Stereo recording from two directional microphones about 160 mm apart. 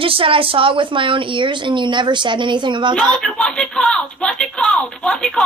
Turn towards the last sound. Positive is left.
turn(degrees=5)  # may be behind; listen again after turning